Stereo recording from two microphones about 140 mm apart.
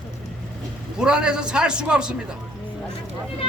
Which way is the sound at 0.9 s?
5° right (ahead or behind).